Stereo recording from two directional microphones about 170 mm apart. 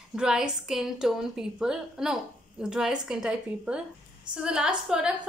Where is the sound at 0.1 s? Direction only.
5° right (ahead or behind).